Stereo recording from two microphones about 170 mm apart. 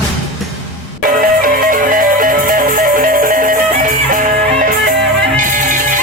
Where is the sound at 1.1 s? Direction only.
55° right (ahead or behind).